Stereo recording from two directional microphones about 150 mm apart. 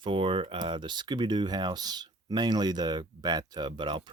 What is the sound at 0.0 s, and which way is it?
Speech, 35° right (ahead or behind).